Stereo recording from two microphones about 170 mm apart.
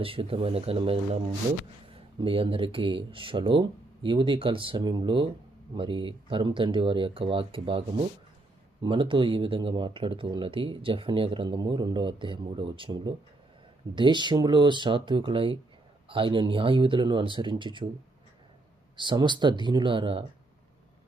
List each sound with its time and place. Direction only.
0.0 s speech: 35° right (ahead or behind)
2.1 s speech: 30° right (ahead or behind)
18.9 s speech: 25° right (ahead or behind)